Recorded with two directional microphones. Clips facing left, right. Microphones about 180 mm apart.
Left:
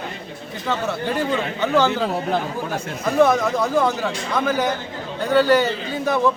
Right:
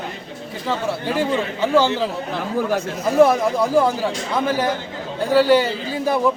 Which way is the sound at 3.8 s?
30° right (ahead or behind).